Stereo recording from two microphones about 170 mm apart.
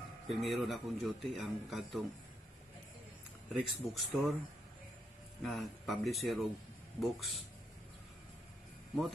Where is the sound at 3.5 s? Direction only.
Centre (ahead or behind).